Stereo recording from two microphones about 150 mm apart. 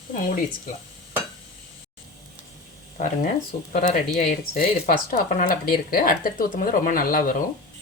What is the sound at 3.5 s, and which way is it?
Speech, 65° left (ahead or behind).